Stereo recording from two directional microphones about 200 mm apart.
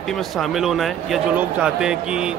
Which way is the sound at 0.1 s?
Centre (ahead or behind).